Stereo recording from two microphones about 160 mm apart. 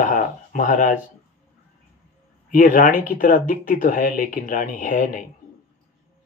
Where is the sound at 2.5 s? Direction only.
60° left (ahead or behind).